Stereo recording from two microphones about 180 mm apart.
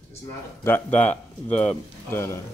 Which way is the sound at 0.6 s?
10° left (ahead or behind).